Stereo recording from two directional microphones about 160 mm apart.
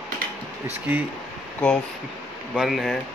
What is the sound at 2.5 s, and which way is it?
Speech, centre (ahead or behind).